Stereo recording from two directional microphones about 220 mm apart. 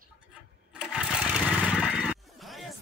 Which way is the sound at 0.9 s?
Centre (ahead or behind).